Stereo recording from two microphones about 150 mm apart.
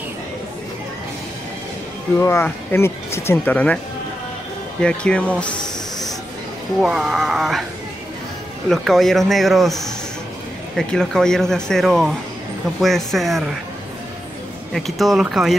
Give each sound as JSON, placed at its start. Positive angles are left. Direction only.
{"t": 2.1, "sound": "speech", "side_deg": 15}
{"t": 4.8, "sound": "speech", "side_deg": 5}
{"t": 6.8, "sound": "speech", "side_deg": 0}
{"t": 8.6, "sound": "speech", "side_deg": 0}
{"t": 14.7, "sound": "speech", "side_deg": 0}